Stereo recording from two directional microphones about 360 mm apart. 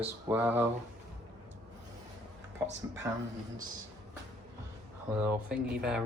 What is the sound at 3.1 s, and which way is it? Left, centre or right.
Speech, centre.